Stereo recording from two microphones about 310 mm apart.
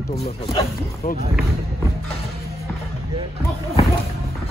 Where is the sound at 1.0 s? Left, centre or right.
Left.